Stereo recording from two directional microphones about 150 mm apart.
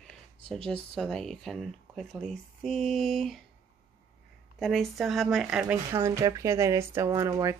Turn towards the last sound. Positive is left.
turn(degrees=-20)  # may be behind; listen again after turning